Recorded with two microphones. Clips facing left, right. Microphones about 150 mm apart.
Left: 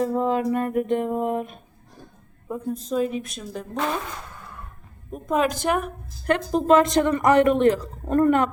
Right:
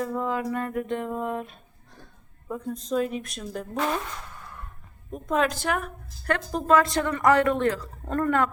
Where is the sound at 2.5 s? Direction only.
5° left (ahead or behind).